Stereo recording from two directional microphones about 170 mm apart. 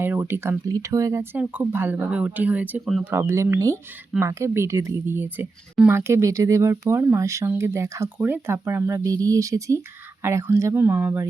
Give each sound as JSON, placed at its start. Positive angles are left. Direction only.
{"t": 0.0, "sound": "speech", "side_deg": -10}
{"t": 3.1, "sound": "speech", "side_deg": -15}